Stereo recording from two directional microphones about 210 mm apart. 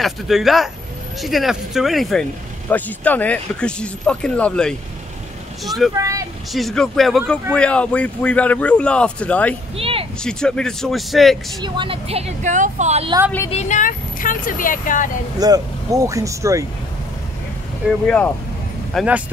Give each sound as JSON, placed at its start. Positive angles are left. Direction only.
{"t": 0.0, "sound": "speech", "side_deg": 0}
{"t": 5.9, "sound": "speech", "side_deg": -15}
{"t": 6.5, "sound": "speech", "side_deg": 0}
{"t": 9.8, "sound": "a sound", "side_deg": -25}
{"t": 10.2, "sound": "speech", "side_deg": 5}
{"t": 11.6, "sound": "speech", "side_deg": -20}
{"t": 13.5, "sound": "speech", "side_deg": 35}
{"t": 15.3, "sound": "speech", "side_deg": -15}
{"t": 18.0, "sound": "speech", "side_deg": 5}
{"t": 18.9, "sound": "speech", "side_deg": -5}